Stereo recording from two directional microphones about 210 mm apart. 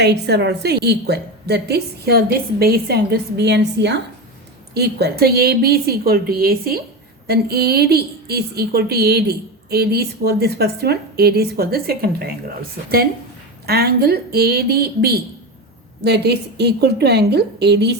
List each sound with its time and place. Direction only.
0.0 s a woman's voice: 55° right (ahead or behind)
13.7 s a woman's voice: 50° right (ahead or behind)